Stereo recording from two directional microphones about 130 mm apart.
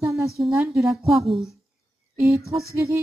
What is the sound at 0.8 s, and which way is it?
Speech, centre (ahead or behind).